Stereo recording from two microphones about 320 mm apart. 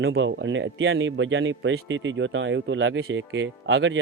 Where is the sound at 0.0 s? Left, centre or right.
Right.